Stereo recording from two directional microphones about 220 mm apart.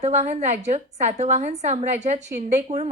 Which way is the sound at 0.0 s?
30° right (ahead or behind).